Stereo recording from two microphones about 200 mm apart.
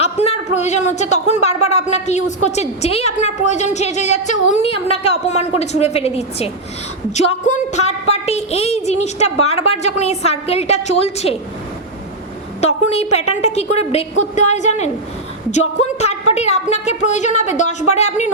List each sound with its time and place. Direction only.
0.0 s a woman's voice: 30° left (ahead or behind)
12.6 s a woman's voice: 30° left (ahead or behind)